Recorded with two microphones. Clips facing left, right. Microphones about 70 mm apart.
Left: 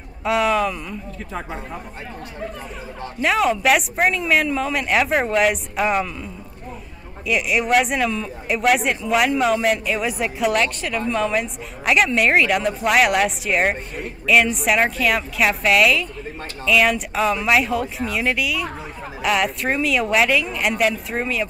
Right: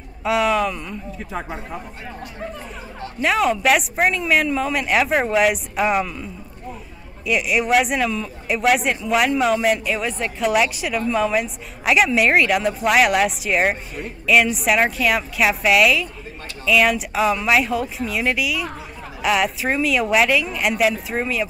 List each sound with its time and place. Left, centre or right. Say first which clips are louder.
0.2 s a woman's voice: even; centre
3.2 s a woman's voice: even; centre
7.2 s a woman's voice: even; centre
10.5 s a woman's voice: right 2 dB; centre